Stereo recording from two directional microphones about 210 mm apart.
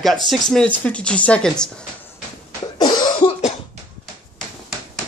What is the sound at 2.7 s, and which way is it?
Cough, 20° left (ahead or behind).